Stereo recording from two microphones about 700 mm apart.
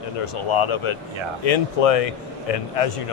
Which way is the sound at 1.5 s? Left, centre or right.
Left.